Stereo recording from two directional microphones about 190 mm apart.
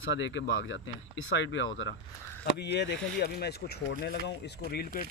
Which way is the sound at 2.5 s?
60° left (ahead or behind).